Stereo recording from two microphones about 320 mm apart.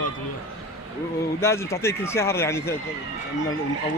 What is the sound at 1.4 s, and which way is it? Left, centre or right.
Speech, centre.